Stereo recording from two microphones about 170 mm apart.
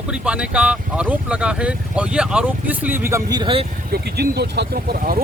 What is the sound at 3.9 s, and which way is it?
Speech, 70° right (ahead or behind).